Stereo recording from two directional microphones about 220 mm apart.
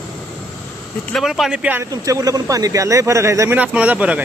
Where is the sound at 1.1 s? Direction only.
Centre (ahead or behind).